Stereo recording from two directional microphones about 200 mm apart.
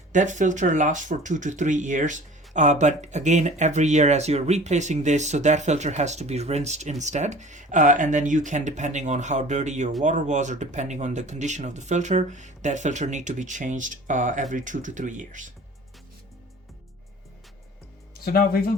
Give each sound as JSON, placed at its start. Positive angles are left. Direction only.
{"t": 0.1, "sound": "speech", "side_deg": -40}
{"t": 18.1, "sound": "speech", "side_deg": 50}